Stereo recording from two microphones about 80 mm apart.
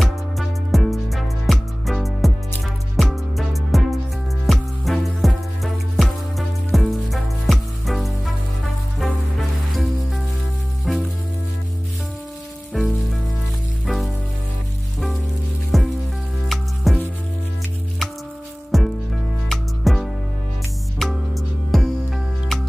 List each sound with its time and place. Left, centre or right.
0.0 s music: centre
10.9 s music: centre
12.8 s rain on surface: centre
13.8 s music: centre
15.7 s music: centre
18.7 s music: centre